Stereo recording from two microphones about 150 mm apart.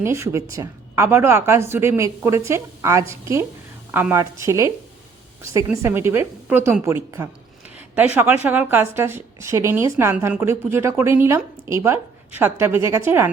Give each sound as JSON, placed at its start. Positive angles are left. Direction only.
{"t": 0.0, "sound": "a woman's voice", "side_deg": -20}
{"t": 5.8, "sound": "a woman's voice", "side_deg": -15}